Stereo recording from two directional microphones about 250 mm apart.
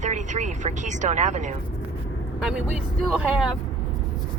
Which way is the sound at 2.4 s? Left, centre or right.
Centre.